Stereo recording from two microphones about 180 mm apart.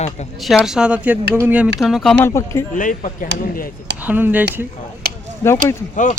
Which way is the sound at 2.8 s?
45° left (ahead or behind).